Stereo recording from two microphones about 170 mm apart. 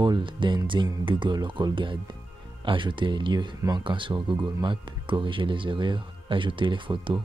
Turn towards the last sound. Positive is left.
turn(degrees=-30)  # may be behind; listen again after turning